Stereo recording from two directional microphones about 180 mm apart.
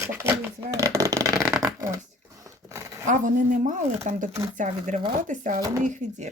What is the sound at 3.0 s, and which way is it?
Speech, 45° right (ahead or behind).